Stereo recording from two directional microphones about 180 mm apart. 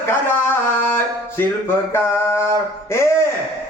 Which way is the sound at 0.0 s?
10° left (ahead or behind).